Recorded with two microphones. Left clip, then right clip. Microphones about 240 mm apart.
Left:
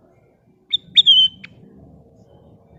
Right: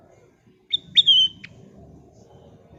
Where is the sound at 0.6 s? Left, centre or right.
Left.